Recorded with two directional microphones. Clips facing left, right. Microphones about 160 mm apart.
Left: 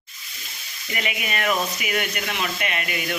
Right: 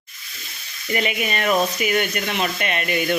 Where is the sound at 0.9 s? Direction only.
30° right (ahead or behind).